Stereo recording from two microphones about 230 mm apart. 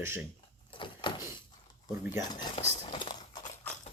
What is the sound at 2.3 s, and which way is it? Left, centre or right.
Clip-clop, left.